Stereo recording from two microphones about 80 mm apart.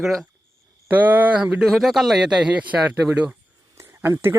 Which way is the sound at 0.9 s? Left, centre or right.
Right.